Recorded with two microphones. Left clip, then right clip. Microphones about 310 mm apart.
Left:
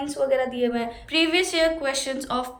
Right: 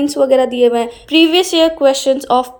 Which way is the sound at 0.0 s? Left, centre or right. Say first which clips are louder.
Right 11 dB; centre.